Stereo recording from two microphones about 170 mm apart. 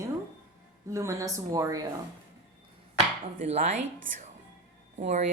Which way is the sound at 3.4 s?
45° right (ahead or behind).